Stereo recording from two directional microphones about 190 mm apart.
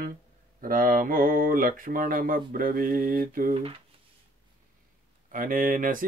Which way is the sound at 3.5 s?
30° right (ahead or behind).